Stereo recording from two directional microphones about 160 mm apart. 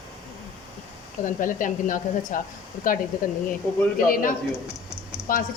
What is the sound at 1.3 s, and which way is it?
A woman's voice, 55° left (ahead or behind).